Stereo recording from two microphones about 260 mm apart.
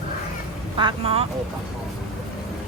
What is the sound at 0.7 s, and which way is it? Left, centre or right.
Speech, centre.